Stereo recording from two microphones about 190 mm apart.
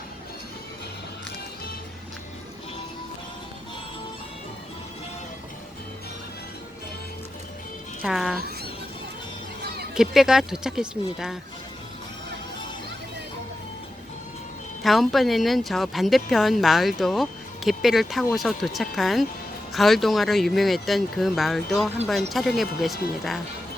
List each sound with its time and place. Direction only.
8.0 s speech: centre (ahead or behind)
9.6 s a sound: 55° right (ahead or behind)
9.9 s speech: centre (ahead or behind)
14.8 s speech: centre (ahead or behind)